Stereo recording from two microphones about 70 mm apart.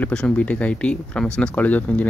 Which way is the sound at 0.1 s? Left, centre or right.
Centre.